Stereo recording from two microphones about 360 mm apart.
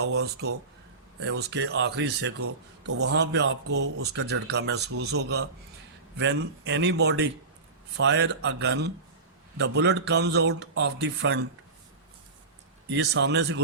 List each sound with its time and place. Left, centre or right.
0.0 s speech: right
12.9 s speech: right